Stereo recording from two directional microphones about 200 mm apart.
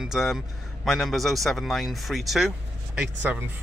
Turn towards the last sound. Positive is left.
turn(degrees=-10)  # may be behind; listen again after turning